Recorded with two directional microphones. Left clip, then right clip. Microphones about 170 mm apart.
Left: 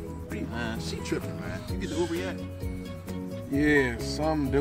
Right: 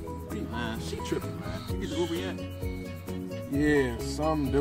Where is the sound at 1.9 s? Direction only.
15° left (ahead or behind).